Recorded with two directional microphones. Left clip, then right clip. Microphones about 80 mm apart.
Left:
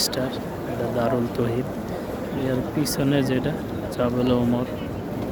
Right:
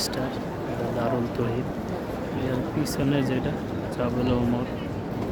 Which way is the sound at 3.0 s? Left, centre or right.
Left.